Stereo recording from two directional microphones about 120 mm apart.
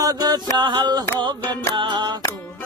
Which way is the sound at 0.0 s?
30° right (ahead or behind).